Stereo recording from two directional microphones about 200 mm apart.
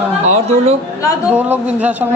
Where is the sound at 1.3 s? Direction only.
10° right (ahead or behind).